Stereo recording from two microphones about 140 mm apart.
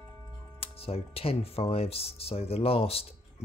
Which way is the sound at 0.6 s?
45° left (ahead or behind).